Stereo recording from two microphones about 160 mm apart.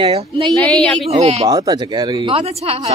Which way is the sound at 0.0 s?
35° right (ahead or behind).